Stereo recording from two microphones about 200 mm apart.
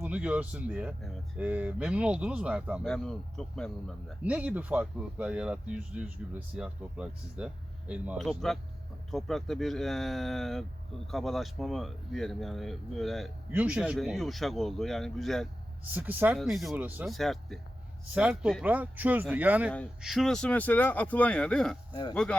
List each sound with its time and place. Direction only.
0.0 s speech: 5° right (ahead or behind)
15.8 s speech: 10° right (ahead or behind)
19.7 s speech: centre (ahead or behind)